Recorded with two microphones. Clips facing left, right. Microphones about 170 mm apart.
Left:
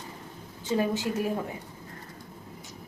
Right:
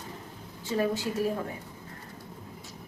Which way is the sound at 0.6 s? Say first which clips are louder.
Left 1 dB; 20° left (ahead or behind).